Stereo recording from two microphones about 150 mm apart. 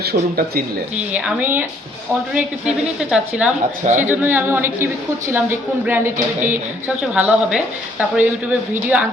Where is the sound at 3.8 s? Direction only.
50° right (ahead or behind).